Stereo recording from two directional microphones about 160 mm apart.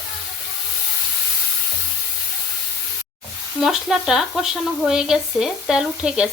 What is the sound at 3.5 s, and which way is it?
Frying, 5° right (ahead or behind).